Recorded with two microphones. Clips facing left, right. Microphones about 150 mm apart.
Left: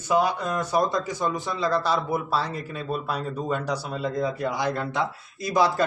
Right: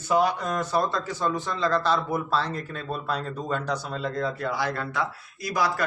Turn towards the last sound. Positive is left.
turn(degrees=25)  # may be behind; listen again after turning